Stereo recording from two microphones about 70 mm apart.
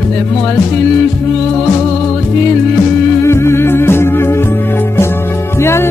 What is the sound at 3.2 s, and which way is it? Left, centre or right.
Music, left.